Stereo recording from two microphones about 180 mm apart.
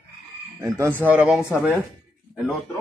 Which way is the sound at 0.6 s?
15° right (ahead or behind).